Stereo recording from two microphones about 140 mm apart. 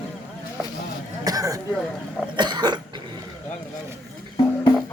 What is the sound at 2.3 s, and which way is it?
Cough, 30° right (ahead or behind).